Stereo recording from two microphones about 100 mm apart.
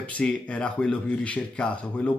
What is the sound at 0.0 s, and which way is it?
Speech, 10° left (ahead or behind).